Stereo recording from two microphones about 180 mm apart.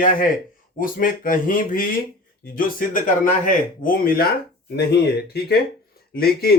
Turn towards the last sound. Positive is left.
turn(degrees=60)  # may be behind; listen again after turning